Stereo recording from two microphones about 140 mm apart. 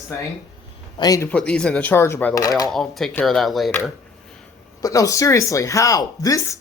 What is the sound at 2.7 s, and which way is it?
Speech, 5° left (ahead or behind).